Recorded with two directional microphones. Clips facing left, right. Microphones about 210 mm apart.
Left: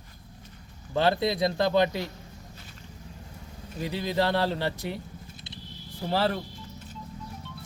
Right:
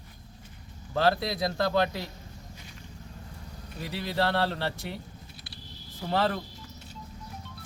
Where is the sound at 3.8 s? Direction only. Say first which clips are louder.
Left 2 dB; 20° left (ahead or behind).